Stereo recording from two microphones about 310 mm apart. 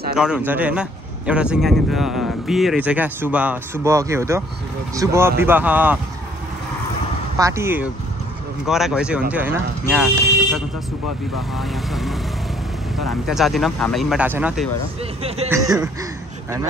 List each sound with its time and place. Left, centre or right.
0.1 s a man's voice: centre
7.3 s a man's voice: centre
11.3 s a man's voice: centre
15.2 s speech: centre